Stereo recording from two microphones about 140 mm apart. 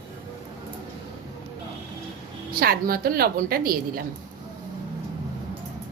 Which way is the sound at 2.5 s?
90° right.